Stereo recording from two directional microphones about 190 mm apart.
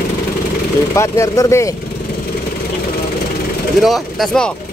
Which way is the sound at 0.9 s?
15° left (ahead or behind).